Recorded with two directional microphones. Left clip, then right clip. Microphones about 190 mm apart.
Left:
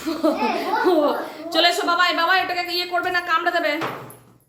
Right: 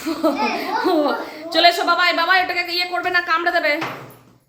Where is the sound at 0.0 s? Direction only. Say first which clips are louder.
Right 1 dB; 5° right (ahead or behind).